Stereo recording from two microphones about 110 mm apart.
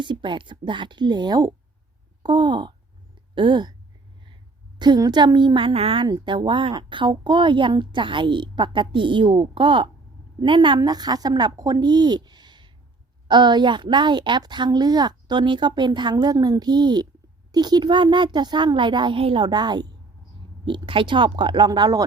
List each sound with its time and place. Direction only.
0.0 s speech: 45° right (ahead or behind)
4.8 s speech: 40° right (ahead or behind); by 6.1 s 55° right (ahead or behind)
6.1 s speech: 45° right (ahead or behind)
10.8 s speech: 35° right (ahead or behind)